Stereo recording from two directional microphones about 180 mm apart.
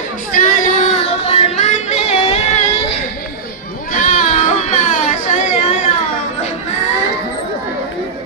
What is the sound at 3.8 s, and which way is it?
Goat, 45° left (ahead or behind).